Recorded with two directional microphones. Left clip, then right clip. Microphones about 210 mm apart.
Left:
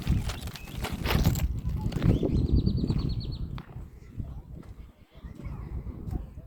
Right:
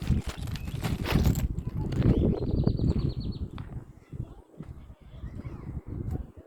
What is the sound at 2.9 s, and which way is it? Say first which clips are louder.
Bird flight: right 2 dB; 25° left (ahead or behind).